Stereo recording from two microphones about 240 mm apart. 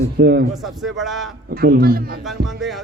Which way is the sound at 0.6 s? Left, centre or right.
Centre.